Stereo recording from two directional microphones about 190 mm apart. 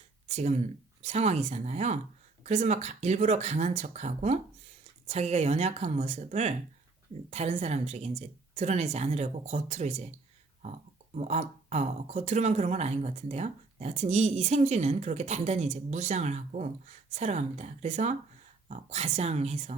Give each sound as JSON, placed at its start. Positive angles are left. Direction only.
{"t": 0.3, "sound": "speech", "side_deg": -35}